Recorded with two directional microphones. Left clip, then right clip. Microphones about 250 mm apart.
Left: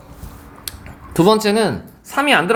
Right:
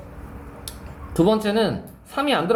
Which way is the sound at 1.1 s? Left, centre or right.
Left.